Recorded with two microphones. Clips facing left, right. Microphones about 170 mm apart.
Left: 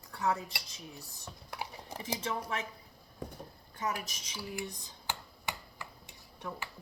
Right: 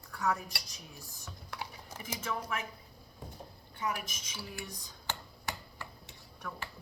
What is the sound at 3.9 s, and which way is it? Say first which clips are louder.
Speech: even; 30° left (ahead or behind).